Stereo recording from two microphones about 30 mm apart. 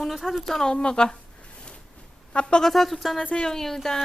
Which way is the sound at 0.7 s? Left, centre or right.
Left.